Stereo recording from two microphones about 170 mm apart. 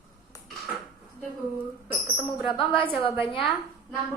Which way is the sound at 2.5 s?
30° left (ahead or behind).